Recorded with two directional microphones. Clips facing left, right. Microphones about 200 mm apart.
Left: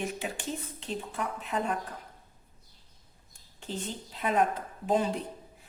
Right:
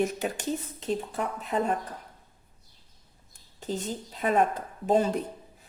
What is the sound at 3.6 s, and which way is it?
Speech, 40° right (ahead or behind).